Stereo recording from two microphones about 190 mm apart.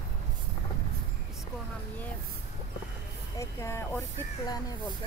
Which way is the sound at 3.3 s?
15° left (ahead or behind).